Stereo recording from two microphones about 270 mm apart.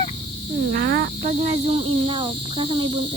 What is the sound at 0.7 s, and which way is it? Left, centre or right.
Cricket, right.